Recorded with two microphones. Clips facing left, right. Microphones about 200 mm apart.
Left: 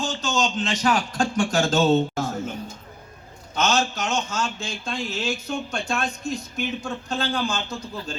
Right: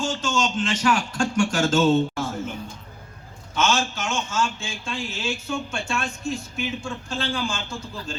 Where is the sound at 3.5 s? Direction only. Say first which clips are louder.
Left 1 dB; 40° left (ahead or behind).